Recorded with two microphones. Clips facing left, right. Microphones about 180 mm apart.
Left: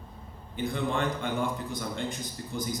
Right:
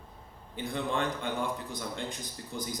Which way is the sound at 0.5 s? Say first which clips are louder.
Left 2 dB; 50° left (ahead or behind).